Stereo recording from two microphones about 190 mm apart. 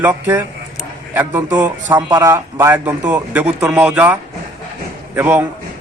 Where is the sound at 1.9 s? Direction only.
20° right (ahead or behind).